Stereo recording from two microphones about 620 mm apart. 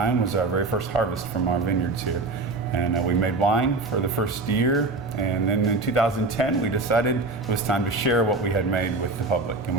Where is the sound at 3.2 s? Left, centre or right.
Left.